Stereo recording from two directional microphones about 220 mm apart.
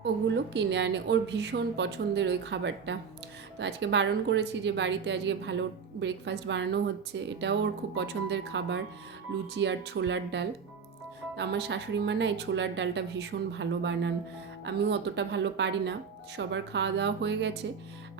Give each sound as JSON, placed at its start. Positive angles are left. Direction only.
{"t": 0.0, "sound": "a woman's voice", "side_deg": -50}